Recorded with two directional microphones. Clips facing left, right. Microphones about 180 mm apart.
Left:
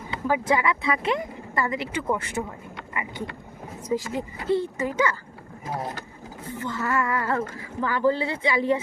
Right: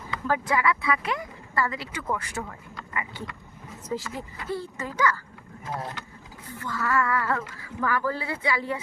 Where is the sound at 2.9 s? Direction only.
20° left (ahead or behind).